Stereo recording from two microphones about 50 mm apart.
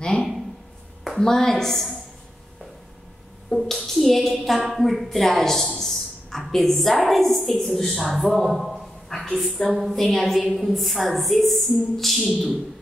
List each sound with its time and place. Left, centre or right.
0.0 s a sound: centre
1.2 s a woman's voice: centre
3.4 s a woman's voice: centre